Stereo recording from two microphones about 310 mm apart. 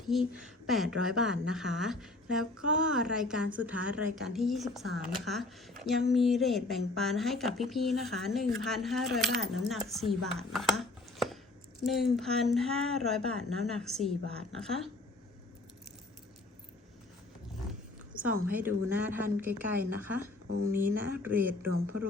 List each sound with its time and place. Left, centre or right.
0.1 s speech: centre
10.3 s a sound: centre
11.8 s speech: centre
18.4 s speech: centre
20.7 s speech: right
21.2 s speech: centre